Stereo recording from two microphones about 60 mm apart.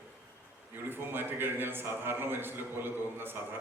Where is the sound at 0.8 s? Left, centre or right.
Right.